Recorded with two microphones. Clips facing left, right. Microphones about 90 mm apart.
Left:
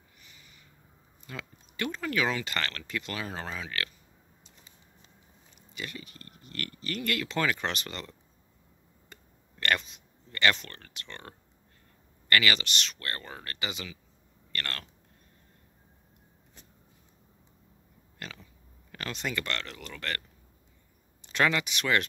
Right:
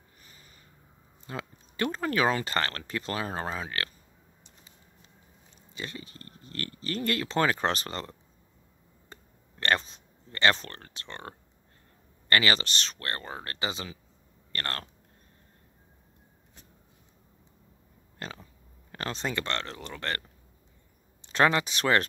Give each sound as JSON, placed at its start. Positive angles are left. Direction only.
{"t": 0.2, "sound": "a sound", "side_deg": -40}
{"t": 1.2, "sound": "speech", "side_deg": -35}
{"t": 5.8, "sound": "speech", "side_deg": -30}
{"t": 18.2, "sound": "speech", "side_deg": -35}